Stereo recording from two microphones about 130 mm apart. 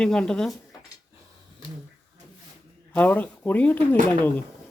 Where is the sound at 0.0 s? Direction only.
5° left (ahead or behind).